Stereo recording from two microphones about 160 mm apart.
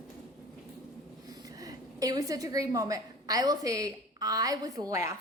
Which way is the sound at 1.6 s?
25° right (ahead or behind).